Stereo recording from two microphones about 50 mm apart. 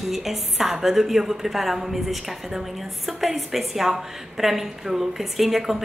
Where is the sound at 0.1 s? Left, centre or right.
Centre.